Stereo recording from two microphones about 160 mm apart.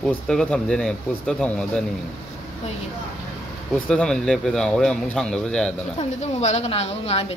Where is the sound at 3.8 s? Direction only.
5° left (ahead or behind).